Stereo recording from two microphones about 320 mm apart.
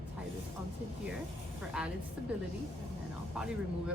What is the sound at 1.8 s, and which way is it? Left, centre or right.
Speech, centre.